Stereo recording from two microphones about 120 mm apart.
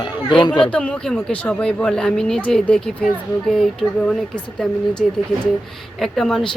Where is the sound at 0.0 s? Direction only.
40° left (ahead or behind).